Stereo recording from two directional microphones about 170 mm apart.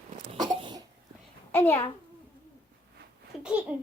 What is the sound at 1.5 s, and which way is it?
Speech, 15° left (ahead or behind).